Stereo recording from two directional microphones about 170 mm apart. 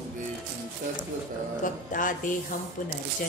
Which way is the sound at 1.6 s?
50° left (ahead or behind).